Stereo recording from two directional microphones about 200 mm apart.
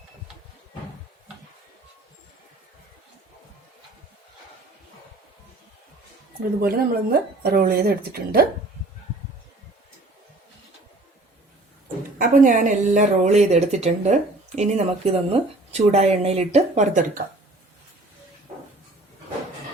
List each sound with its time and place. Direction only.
6.6 s speech: 50° right (ahead or behind)
12.2 s a woman's voice: 40° right (ahead or behind)